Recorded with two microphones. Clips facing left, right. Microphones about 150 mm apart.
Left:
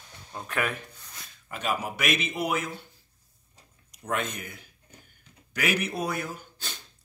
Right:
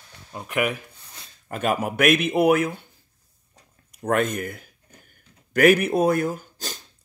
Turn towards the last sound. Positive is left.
turn(degrees=-45)  # may be behind; listen again after turning